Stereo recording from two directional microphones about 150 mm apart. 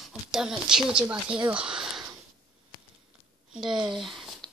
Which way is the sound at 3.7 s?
30° right (ahead or behind).